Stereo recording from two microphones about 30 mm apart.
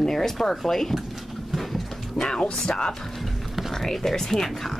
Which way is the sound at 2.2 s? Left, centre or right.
Left.